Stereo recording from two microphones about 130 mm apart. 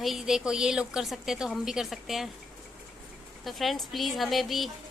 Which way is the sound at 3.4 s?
Centre (ahead or behind).